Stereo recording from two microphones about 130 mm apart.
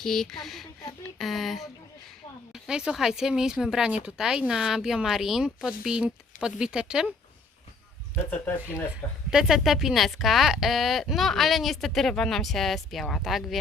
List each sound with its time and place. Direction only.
0.0 s speech: 5° left (ahead or behind)
1.2 s a sound: centre (ahead or behind)
2.5 s speech: 5° right (ahead or behind)
8.2 s speech: 15° left (ahead or behind)
9.3 s speech: 5° right (ahead or behind)